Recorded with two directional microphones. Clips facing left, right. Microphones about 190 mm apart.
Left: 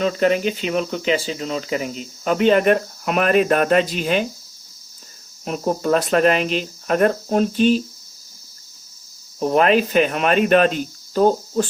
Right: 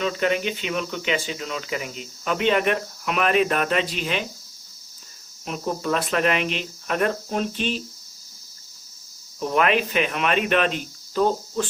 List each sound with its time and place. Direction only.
0.0 s speech: 40° left (ahead or behind)
5.5 s speech: 45° left (ahead or behind)
9.4 s speech: 35° left (ahead or behind)